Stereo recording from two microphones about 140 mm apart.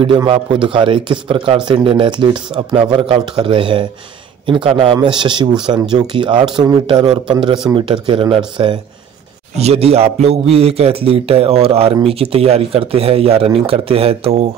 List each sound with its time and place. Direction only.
0.0 s a man's voice: 35° right (ahead or behind)